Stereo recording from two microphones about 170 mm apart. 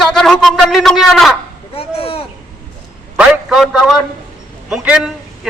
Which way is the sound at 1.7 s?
35° left (ahead or behind).